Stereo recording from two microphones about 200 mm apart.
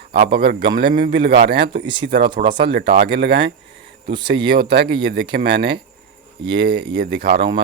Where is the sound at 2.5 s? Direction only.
25° right (ahead or behind).